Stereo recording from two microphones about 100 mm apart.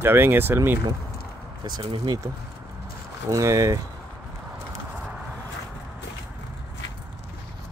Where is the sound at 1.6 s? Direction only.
50° right (ahead or behind).